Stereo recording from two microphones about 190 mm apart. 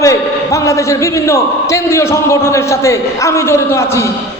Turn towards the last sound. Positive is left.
turn(degrees=15)  # may be behind; listen again after turning